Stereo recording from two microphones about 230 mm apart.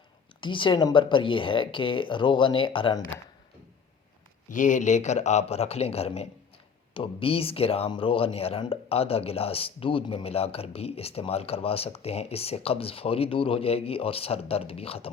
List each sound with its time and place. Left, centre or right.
0.4 s speech: left
4.4 s speech: left